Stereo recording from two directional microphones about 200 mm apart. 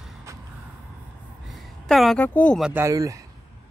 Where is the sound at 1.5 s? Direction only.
Centre (ahead or behind).